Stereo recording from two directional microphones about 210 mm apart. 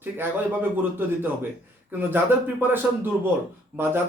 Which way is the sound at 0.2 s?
10° right (ahead or behind).